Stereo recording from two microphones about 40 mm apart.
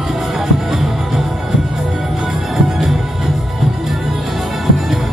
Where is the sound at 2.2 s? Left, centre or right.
Centre.